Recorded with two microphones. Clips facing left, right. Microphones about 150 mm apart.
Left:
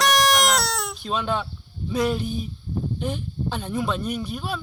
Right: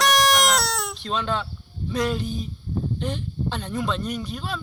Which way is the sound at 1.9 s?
10° left (ahead or behind).